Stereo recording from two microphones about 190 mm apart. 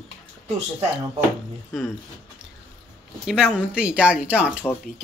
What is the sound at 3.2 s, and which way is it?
Speech, 5° right (ahead or behind).